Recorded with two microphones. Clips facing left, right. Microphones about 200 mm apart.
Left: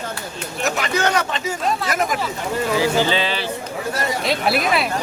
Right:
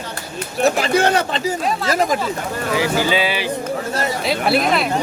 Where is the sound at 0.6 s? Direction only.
30° right (ahead or behind).